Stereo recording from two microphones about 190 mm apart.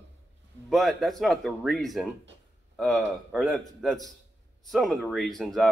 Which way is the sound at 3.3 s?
Centre (ahead or behind).